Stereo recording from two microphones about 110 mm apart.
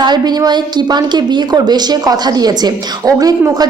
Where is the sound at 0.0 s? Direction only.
40° right (ahead or behind).